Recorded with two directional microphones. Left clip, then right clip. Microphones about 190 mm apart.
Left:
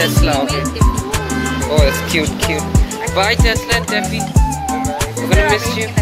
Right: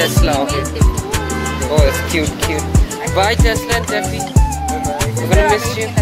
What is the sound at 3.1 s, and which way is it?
Music, 15° right (ahead or behind).